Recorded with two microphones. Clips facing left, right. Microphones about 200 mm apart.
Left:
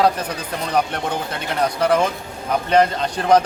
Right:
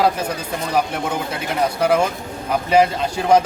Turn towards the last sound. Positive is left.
turn(degrees=-5)  # may be behind; listen again after turning